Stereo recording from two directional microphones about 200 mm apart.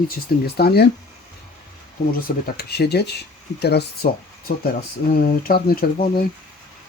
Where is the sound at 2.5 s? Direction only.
50° left (ahead or behind).